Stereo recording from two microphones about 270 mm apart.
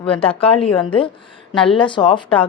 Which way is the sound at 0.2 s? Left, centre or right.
Left.